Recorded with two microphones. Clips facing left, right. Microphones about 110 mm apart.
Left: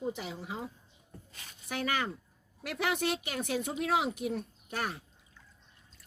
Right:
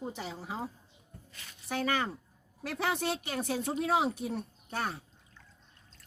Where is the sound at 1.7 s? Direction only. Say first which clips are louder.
Right 2 dB; 35° right (ahead or behind).